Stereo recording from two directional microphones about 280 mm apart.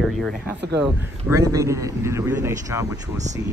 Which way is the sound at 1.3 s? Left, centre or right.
Centre.